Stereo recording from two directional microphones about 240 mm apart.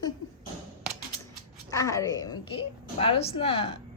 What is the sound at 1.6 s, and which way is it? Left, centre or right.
A woman's voice, centre.